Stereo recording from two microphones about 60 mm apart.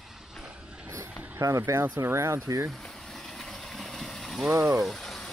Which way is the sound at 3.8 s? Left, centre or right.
Centre.